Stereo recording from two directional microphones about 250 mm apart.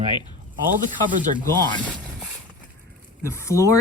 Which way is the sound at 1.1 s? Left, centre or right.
Right.